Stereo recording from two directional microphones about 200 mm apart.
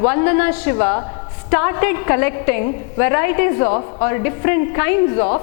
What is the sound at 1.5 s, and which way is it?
A woman's voice, 15° left (ahead or behind).